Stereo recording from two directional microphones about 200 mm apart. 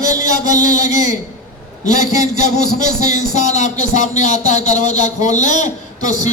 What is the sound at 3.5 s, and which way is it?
A man's voice, 35° left (ahead or behind).